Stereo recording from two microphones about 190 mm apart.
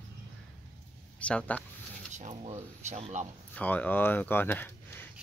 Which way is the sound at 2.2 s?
40° right (ahead or behind).